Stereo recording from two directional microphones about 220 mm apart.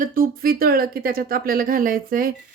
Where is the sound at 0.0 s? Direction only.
40° right (ahead or behind).